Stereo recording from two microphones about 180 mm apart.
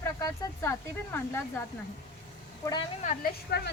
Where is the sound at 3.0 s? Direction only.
60° left (ahead or behind).